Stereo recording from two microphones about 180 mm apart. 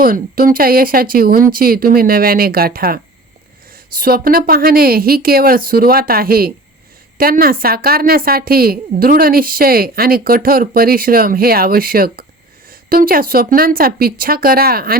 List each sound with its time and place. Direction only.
0.0 s a woman's voice: 50° right (ahead or behind)